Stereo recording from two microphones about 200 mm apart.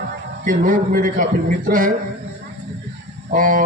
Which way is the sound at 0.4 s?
45° right (ahead or behind).